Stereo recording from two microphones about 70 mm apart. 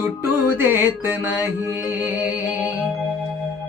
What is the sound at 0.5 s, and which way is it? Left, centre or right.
Mantra, right.